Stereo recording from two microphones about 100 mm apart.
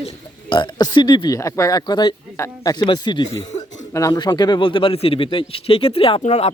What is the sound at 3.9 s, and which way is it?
A man's voice, 40° left (ahead or behind).